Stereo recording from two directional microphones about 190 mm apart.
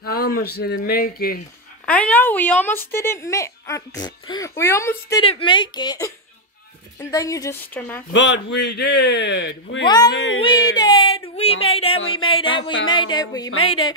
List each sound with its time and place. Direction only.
0.0 s speech: 55° left (ahead or behind)
1.9 s speech: 5° left (ahead or behind)
5.2 s a woman's voice: 30° left (ahead or behind); by 8.0 s 10° left (ahead or behind)
8.1 s speech: 70° left (ahead or behind)
9.8 s a woman's voice: 20° left (ahead or behind)
10.1 s speech: 75° left (ahead or behind)
10.4 s a sound: 20° left (ahead or behind)
11.3 s a woman's voice: 30° left (ahead or behind)